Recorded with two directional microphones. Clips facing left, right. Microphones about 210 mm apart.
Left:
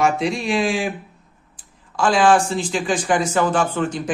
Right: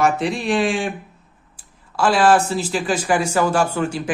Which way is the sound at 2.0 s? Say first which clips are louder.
Even; 5° right (ahead or behind).